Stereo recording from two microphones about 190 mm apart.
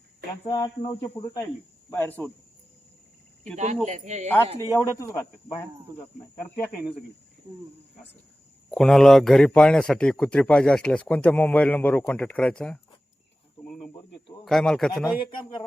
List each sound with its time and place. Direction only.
0.4 s a man's voice: 20° left (ahead or behind)
3.5 s speech: 40° right (ahead or behind)
4.7 s a man's voice: 15° left (ahead or behind)
8.7 s a man's voice: centre (ahead or behind)
13.7 s insect: centre (ahead or behind)
14.4 s a man's voice: 5° left (ahead or behind)
15.3 s speech: 25° left (ahead or behind)